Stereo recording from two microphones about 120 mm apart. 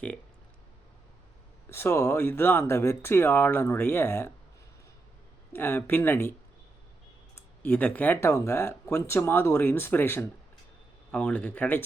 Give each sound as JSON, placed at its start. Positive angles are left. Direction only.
{"t": 1.7, "sound": "speech", "side_deg": 20}
{"t": 5.5, "sound": "speech", "side_deg": 20}
{"t": 7.3, "sound": "speech", "side_deg": 15}